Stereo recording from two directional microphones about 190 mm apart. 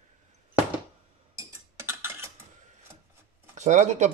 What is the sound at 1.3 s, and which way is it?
Tick-tock, 15° right (ahead or behind).